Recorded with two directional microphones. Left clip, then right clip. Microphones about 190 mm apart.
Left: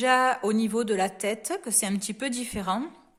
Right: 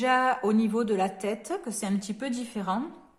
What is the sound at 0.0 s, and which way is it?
A woman's voice, 35° left (ahead or behind).